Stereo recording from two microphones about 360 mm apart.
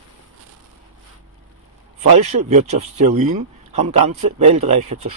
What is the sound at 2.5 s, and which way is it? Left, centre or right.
Speech, centre.